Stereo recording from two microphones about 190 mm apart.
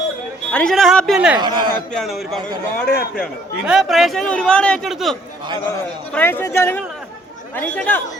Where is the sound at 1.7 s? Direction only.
5° left (ahead or behind).